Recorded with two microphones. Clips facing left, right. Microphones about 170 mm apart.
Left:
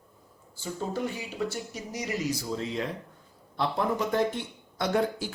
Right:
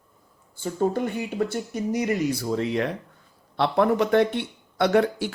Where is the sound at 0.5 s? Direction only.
55° right (ahead or behind); by 5.3 s 70° right (ahead or behind).